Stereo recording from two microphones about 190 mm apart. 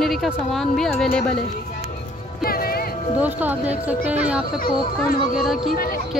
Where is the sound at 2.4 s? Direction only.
50° left (ahead or behind).